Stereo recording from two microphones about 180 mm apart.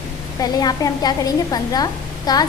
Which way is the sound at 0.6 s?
20° left (ahead or behind).